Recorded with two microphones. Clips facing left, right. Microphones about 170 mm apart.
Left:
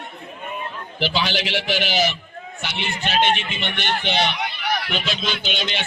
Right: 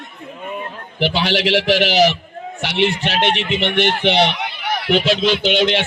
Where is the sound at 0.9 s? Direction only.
65° right (ahead or behind).